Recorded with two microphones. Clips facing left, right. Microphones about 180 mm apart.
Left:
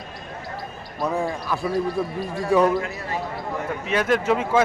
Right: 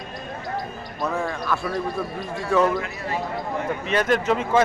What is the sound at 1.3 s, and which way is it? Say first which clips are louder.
Speech: even; 15° left (ahead or behind).